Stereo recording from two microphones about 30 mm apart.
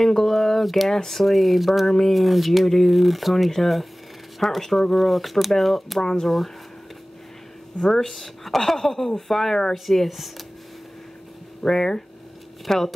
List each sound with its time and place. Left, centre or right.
0.0 s a woman's voice: centre
1.2 s speech: centre
1.9 s a woman's voice: centre
2.1 s a woman's voice: centre
7.8 s speech: centre
8.1 s a woman's voice: centre
11.6 s a woman's voice: centre